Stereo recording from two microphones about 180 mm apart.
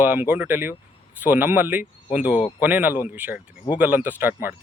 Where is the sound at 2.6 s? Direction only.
10° right (ahead or behind).